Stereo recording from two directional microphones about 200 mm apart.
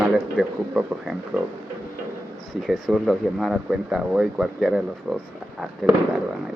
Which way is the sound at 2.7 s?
Centre (ahead or behind).